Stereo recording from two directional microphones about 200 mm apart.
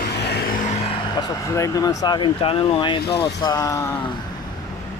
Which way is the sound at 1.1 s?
15° left (ahead or behind).